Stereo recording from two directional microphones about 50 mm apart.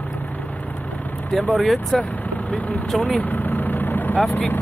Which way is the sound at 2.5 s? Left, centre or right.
Left.